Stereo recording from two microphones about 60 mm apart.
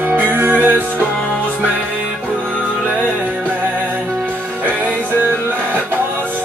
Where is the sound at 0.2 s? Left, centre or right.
Right.